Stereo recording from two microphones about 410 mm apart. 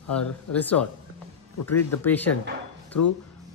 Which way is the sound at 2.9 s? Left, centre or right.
Left.